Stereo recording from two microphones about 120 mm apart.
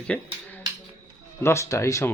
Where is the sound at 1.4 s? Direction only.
25° left (ahead or behind).